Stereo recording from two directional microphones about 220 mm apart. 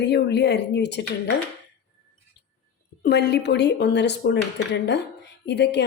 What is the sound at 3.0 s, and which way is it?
A woman's voice, 50° left (ahead or behind).